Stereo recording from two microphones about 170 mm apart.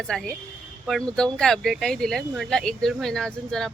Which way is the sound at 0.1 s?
5° left (ahead or behind).